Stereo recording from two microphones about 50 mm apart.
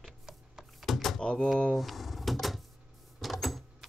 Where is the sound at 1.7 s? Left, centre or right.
Centre.